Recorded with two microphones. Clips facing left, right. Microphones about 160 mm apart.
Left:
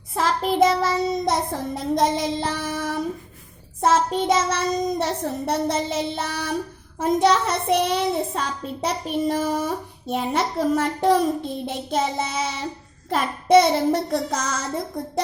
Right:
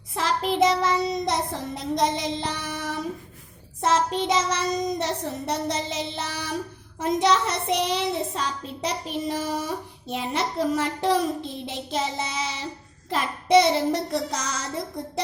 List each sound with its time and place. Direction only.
0.1 s child singing: 50° left (ahead or behind)